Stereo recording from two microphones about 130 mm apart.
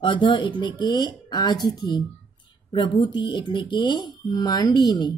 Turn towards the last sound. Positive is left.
turn(degrees=30)  # may be behind; listen again after turning